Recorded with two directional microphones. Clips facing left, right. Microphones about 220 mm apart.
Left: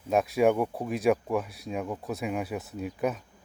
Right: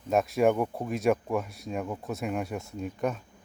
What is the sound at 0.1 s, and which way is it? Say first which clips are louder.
Speech: even; centre (ahead or behind).